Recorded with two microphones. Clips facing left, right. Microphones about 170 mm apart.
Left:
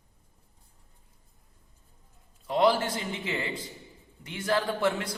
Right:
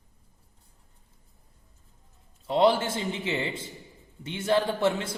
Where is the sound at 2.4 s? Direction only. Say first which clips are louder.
Right 2 dB; 25° right (ahead or behind).